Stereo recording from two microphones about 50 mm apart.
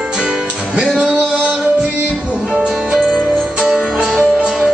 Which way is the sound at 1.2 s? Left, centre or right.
Centre.